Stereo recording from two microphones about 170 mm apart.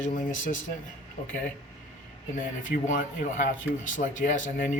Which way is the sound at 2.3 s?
50° left (ahead or behind).